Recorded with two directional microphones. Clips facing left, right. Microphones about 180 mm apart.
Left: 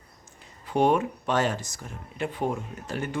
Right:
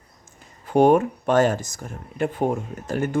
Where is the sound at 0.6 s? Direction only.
50° right (ahead or behind).